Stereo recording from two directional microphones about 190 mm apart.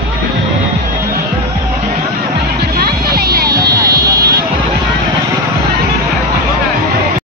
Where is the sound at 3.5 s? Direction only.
20° right (ahead or behind).